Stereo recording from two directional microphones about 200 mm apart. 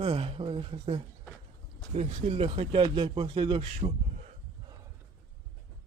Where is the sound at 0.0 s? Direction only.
30° right (ahead or behind).